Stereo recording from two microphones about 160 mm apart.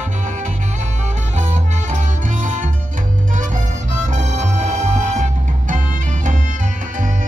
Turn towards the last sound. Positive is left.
turn(degrees=-50)  # may be behind; listen again after turning